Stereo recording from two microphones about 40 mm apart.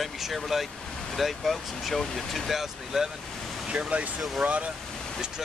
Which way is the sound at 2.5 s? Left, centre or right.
Centre.